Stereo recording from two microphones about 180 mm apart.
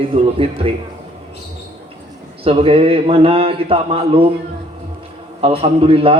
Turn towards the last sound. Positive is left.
turn(degrees=-30)  # may be behind; listen again after turning